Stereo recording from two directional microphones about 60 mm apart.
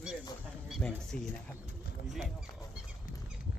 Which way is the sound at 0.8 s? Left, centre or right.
Centre.